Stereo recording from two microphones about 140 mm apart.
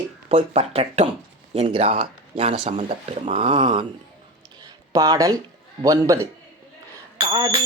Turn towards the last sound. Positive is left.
turn(degrees=-30)  # may be behind; listen again after turning